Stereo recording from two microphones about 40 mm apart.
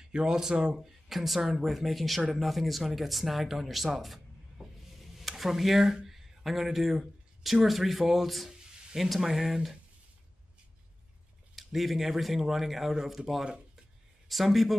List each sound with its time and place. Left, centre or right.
0.0 s speech: centre
0.7 s speech: centre
11.5 s speech: centre
14.3 s speech: centre